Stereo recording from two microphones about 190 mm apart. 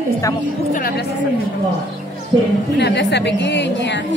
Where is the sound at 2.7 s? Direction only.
65° left (ahead or behind).